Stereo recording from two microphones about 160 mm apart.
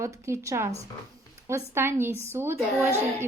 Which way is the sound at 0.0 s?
20° right (ahead or behind).